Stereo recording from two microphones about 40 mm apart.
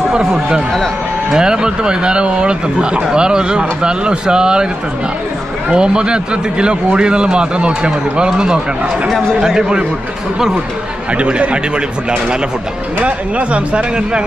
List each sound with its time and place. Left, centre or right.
0.1 s a man's voice: centre
5.7 s a man's voice: right
11.1 s speech: right
13.0 s speech: right